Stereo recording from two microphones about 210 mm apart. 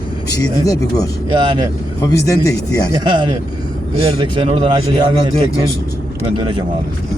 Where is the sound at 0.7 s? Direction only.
15° left (ahead or behind).